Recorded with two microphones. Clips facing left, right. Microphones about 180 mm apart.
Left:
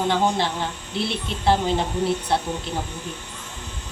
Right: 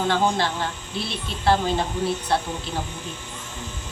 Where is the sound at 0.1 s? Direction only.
20° left (ahead or behind).